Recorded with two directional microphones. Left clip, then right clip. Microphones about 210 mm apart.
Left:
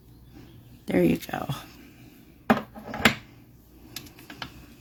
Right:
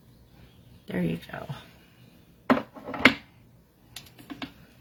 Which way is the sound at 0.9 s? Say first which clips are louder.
Left 9 dB; 55° left (ahead or behind).